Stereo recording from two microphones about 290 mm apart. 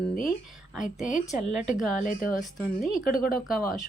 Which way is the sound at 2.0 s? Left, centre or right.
Left.